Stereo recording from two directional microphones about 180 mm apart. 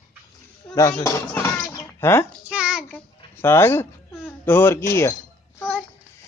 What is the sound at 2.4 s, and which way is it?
Child singing, 5° right (ahead or behind).